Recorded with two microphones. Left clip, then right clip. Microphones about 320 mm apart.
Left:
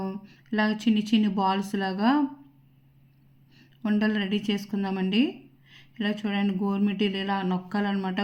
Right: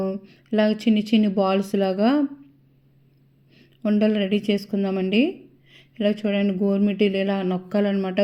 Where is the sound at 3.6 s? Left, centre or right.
Centre.